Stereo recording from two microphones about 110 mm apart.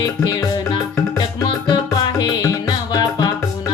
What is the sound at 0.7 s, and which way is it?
Music, 40° left (ahead or behind).